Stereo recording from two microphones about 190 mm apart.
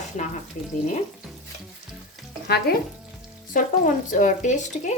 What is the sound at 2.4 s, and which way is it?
Frying, 55° left (ahead or behind).